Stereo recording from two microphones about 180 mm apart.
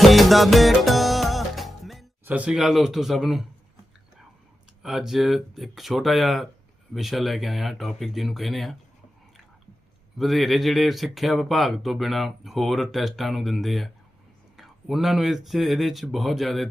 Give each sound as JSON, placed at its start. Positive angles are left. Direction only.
{"t": 0.0, "sound": "music", "side_deg": 0}
{"t": 2.2, "sound": "speech", "side_deg": -5}
{"t": 4.8, "sound": "speech", "side_deg": 0}
{"t": 10.2, "sound": "speech", "side_deg": 0}